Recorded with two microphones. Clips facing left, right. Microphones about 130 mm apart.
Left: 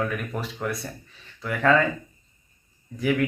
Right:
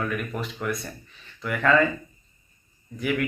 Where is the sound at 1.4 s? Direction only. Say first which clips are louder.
Left 1 dB; 35° left (ahead or behind).